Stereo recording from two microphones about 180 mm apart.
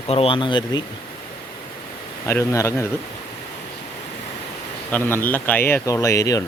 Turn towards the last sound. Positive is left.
turn(degrees=20)  # may be behind; listen again after turning